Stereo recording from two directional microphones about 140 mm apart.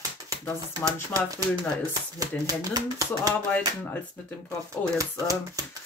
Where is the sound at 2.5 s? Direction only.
25° right (ahead or behind).